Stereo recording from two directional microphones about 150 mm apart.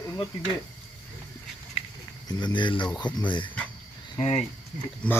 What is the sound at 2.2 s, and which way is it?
Speech, 30° left (ahead or behind).